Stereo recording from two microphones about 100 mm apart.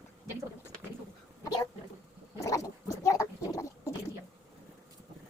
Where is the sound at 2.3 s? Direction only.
35° left (ahead or behind).